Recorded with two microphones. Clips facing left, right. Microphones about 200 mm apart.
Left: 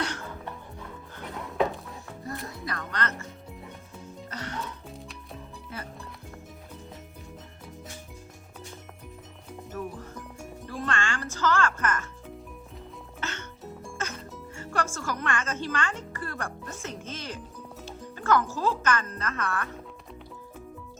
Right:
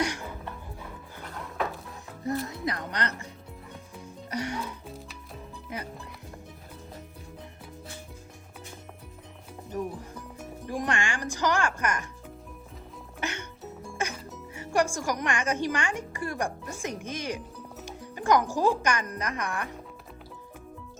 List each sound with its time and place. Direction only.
0.0 s music: 15° right (ahead or behind)
2.2 s speech: 20° right (ahead or behind)
4.3 s speech: 10° right (ahead or behind)
5.7 s speech: 15° right (ahead or behind)
9.7 s music: 15° right (ahead or behind)
13.1 s music: 15° right (ahead or behind)
16.8 s speech: 15° right (ahead or behind)